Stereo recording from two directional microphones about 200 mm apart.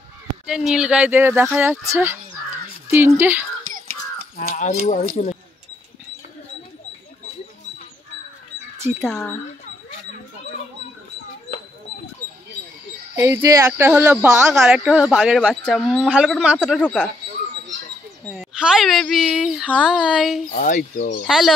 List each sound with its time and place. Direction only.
0.5 s speech: 5° right (ahead or behind)
2.9 s speech: 10° right (ahead or behind)
4.4 s speech: 40° left (ahead or behind)
9.0 s speech: centre (ahead or behind)
13.1 s speech: 15° right (ahead or behind)
14.5 s speech: centre (ahead or behind)
18.2 s speech: centre (ahead or behind)
20.5 s speech: 45° left (ahead or behind)
21.3 s speech: centre (ahead or behind)